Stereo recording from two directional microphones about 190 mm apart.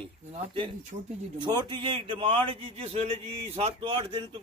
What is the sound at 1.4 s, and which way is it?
A man's voice, 25° right (ahead or behind).